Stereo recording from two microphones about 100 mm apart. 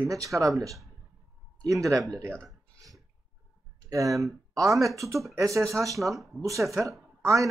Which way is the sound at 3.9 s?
35° right (ahead or behind).